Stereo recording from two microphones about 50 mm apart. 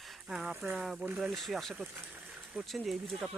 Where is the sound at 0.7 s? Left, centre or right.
Centre.